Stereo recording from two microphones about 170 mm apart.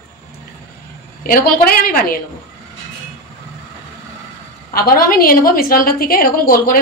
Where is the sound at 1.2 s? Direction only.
60° left (ahead or behind).